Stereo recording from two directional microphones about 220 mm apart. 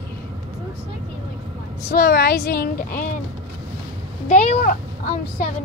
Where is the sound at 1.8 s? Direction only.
45° left (ahead or behind).